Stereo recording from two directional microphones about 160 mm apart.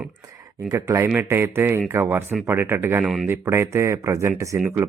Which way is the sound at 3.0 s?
Centre (ahead or behind).